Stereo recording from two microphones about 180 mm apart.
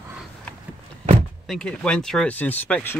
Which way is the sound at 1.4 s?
5° left (ahead or behind).